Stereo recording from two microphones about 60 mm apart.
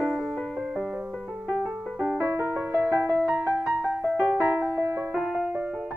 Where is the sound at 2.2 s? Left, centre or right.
Right.